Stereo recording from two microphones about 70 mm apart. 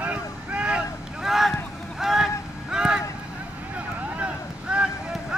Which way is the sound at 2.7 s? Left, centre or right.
Centre.